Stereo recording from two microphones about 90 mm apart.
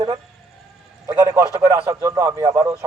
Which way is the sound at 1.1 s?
40° right (ahead or behind).